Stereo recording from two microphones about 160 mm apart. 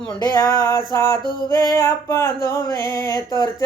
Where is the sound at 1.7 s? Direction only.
15° left (ahead or behind).